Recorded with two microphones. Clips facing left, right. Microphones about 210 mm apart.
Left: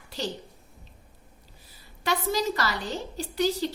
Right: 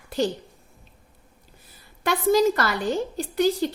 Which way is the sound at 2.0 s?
50° right (ahead or behind).